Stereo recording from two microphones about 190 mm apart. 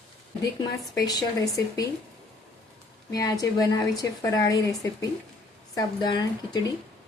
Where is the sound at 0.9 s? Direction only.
20° left (ahead or behind).